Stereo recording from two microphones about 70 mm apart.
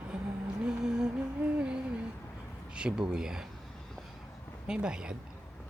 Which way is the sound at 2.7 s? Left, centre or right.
Centre.